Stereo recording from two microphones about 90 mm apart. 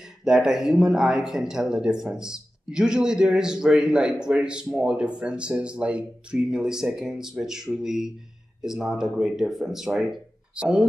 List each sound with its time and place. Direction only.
0.2 s speech: 5° right (ahead or behind)